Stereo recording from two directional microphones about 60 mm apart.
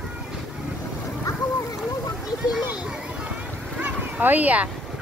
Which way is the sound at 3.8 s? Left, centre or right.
Right.